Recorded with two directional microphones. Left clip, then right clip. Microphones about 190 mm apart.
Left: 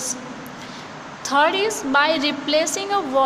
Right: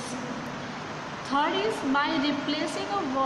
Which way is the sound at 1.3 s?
60° left (ahead or behind).